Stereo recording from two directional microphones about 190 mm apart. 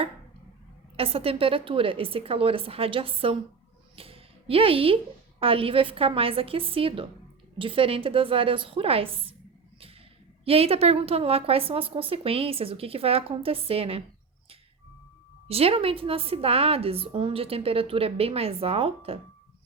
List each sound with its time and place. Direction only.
0.9 s a woman's voice: 30° right (ahead or behind)
3.9 s a sound: 30° right (ahead or behind)
5.4 s a woman's voice: 30° right (ahead or behind)
10.4 s a woman's voice: 30° right (ahead or behind)
15.4 s a woman's voice: 30° right (ahead or behind)